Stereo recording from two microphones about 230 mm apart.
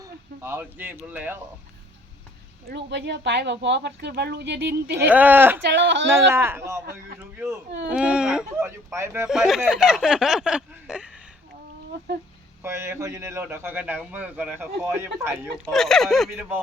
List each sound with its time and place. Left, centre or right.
0.0 s speech: centre
2.6 s speech: right
5.0 s a man's voice: centre
5.6 s speech: right
6.3 s a man's voice: centre
12.6 s a man's voice: centre
15.6 s speech: centre